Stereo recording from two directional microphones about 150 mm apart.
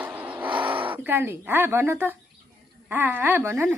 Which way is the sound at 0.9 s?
15° right (ahead or behind).